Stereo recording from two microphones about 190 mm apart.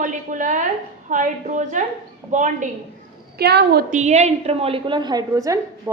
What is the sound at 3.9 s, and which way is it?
A woman's voice, 40° right (ahead or behind).